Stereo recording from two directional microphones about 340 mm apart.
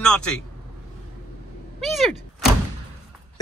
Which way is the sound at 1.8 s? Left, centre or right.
Centre.